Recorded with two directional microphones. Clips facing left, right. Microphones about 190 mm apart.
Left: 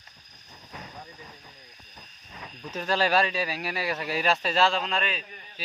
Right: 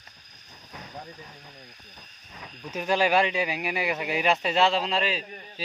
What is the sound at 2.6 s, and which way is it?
Speech, 15° right (ahead or behind).